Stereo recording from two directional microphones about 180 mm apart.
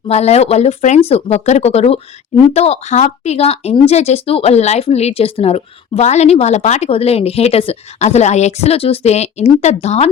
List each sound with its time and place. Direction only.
0.1 s speech: 35° left (ahead or behind)